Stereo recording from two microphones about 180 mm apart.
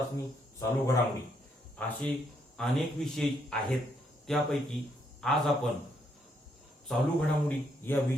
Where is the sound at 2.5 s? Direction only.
5° left (ahead or behind).